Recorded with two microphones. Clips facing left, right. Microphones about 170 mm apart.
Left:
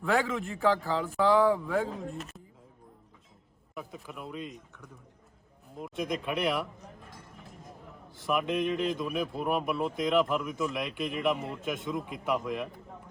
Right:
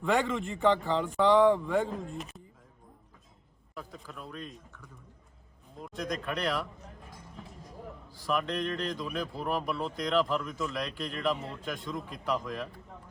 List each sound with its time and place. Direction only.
0.0 s a man's voice: 5° left (ahead or behind)
3.8 s a man's voice: 15° left (ahead or behind)
8.2 s a man's voice: 20° left (ahead or behind)